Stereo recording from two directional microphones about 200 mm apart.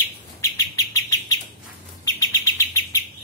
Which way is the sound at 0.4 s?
15° left (ahead or behind).